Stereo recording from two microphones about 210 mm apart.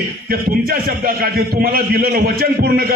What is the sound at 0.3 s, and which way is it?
A man's voice, 45° right (ahead or behind).